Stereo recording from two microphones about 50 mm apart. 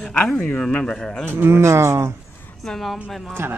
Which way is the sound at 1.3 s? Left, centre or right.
Right.